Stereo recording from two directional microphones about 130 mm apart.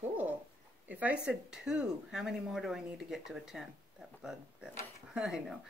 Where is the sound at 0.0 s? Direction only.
10° right (ahead or behind).